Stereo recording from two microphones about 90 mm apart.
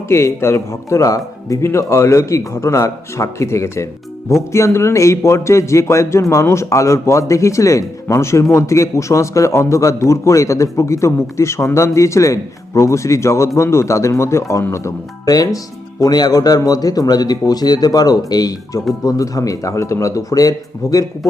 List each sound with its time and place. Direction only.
0.1 s a man's voice: 30° left (ahead or behind)